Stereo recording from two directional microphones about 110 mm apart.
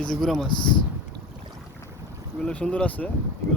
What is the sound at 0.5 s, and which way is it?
Speech, 45° left (ahead or behind).